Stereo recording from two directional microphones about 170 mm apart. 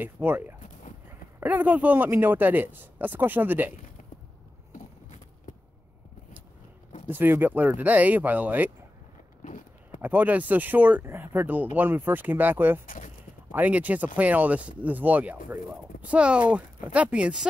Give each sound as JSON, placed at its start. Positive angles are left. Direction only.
{"t": 0.0, "sound": "speech", "side_deg": -10}
{"t": 7.1, "sound": "speech", "side_deg": -10}
{"t": 9.4, "sound": "a sound", "side_deg": 50}
{"t": 10.0, "sound": "speech", "side_deg": -10}
{"t": 12.8, "sound": "speech", "side_deg": 50}
{"t": 13.5, "sound": "speech", "side_deg": -10}